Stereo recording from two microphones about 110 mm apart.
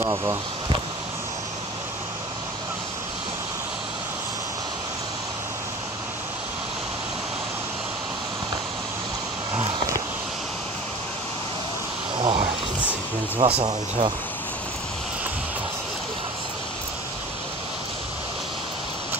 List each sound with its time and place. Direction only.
0.0 s speech: 30° right (ahead or behind)
12.2 s vehicle: 55° right (ahead or behind)
13.4 s speech: 60° right (ahead or behind)
13.7 s speech: 45° right (ahead or behind)